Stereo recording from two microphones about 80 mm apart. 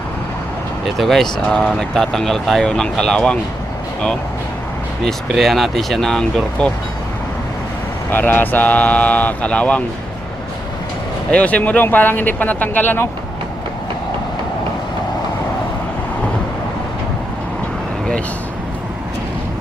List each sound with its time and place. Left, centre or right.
0.9 s speech: centre
5.0 s speech: centre
8.1 s speech: left
11.3 s speech: centre